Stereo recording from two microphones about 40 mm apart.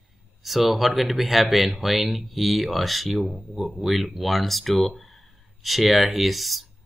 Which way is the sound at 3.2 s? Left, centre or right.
Centre.